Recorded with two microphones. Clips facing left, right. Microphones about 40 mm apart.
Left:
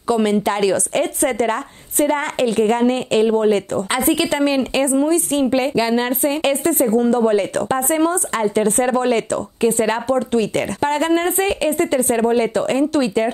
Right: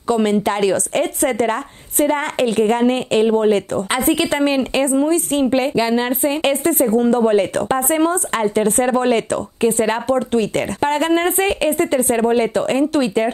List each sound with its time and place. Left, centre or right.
0.1 s a woman's voice: centre
8.7 s a woman's voice: centre
9.0 s speech: right
9.8 s a woman's voice: centre
10.8 s a woman's voice: centre